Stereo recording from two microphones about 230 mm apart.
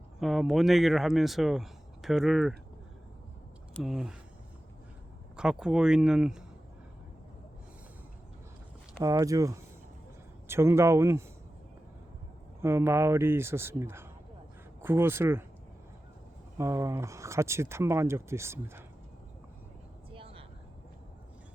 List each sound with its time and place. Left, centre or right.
0.2 s speech: centre
3.8 s speech: centre
5.4 s speech: centre
9.0 s speech: centre
12.6 s speech: centre
16.6 s speech: centre
20.1 s vehicle: right